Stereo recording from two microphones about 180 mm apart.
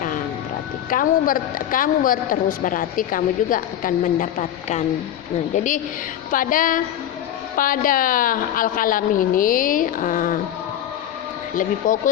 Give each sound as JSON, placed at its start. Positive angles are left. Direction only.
{"t": 0.9, "sound": "a woman's voice", "side_deg": 50}
{"t": 11.5, "sound": "a woman's voice", "side_deg": 45}